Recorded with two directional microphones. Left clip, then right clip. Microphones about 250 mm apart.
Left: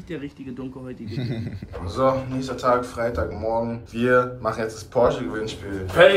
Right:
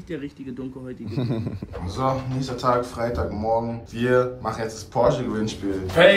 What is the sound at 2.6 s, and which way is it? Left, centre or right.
A man's voice, centre.